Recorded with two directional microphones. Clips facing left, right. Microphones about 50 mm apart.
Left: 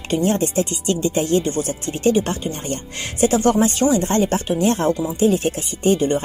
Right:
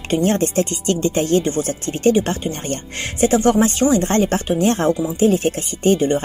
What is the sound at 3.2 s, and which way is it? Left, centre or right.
A woman's voice, right.